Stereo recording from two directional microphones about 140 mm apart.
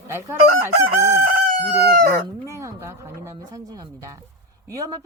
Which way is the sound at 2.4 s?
20° right (ahead or behind).